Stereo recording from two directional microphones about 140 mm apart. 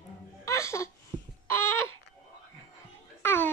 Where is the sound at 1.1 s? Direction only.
30° right (ahead or behind).